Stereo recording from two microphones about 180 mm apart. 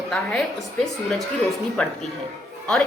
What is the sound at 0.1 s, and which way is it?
Speech, 5° left (ahead or behind).